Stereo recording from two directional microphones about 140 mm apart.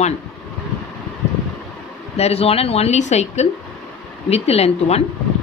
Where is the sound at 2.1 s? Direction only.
45° left (ahead or behind).